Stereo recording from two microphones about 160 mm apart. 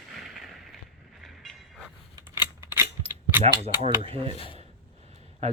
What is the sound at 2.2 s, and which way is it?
Scissors, 15° right (ahead or behind).